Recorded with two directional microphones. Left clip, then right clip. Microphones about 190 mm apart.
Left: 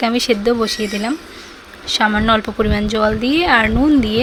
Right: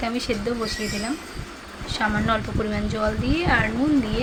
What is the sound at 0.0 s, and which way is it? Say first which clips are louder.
A woman's voice: left 10 dB; 55° left (ahead or behind).